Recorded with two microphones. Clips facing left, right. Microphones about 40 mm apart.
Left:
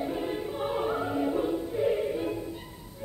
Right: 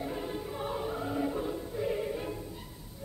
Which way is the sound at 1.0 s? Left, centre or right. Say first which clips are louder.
Left 5 dB; centre.